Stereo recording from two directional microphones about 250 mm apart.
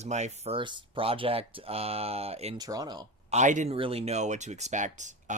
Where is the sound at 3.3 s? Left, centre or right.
Right.